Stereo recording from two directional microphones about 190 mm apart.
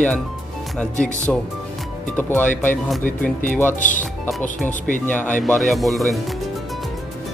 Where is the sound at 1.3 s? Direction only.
Centre (ahead or behind).